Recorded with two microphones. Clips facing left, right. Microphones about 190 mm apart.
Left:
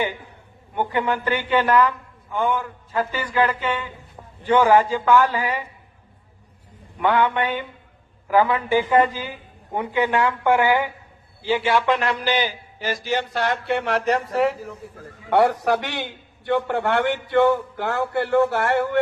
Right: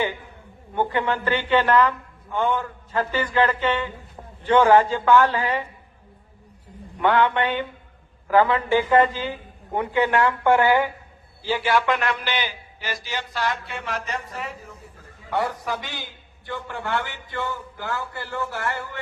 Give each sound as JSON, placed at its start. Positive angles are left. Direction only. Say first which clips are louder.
{"t": 0.8, "sound": "a man's voice", "louder": "even", "side_deg": 15}
{"t": 7.0, "sound": "a man's voice", "louder": "even", "side_deg": 10}
{"t": 15.3, "sound": "a man's voice", "louder": "left 8 dB", "side_deg": 70}